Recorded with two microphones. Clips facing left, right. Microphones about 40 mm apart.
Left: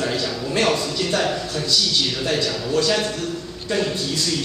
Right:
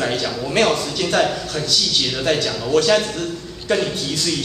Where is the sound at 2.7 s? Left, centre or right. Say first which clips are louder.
Right 4 dB; right.